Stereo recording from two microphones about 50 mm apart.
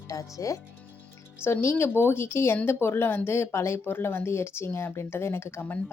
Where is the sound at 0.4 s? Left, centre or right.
Left.